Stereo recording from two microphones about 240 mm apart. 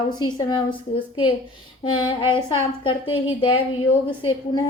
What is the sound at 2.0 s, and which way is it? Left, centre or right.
A woman's voice, centre.